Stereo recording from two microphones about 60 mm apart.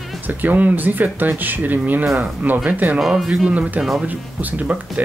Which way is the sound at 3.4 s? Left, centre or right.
Right.